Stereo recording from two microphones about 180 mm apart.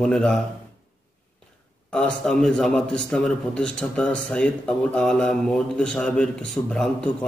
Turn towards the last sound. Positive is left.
turn(degrees=5)  # may be behind; listen again after turning